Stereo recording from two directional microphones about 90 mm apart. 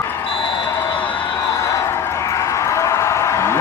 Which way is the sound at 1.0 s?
15° left (ahead or behind).